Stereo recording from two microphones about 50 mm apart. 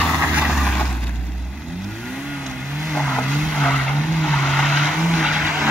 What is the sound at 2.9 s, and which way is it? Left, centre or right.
Vehicle, centre.